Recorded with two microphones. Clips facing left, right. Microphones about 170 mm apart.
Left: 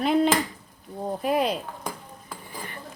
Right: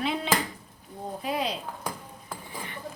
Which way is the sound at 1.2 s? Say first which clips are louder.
Left 6 dB; 50° left (ahead or behind).